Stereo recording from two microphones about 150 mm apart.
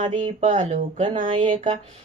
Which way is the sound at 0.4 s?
50° right (ahead or behind).